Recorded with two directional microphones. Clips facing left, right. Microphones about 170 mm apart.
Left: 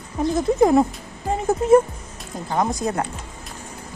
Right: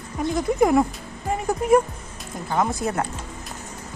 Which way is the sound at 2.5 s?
20° left (ahead or behind).